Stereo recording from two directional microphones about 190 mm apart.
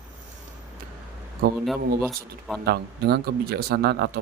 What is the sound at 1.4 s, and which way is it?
Speech, 50° right (ahead or behind).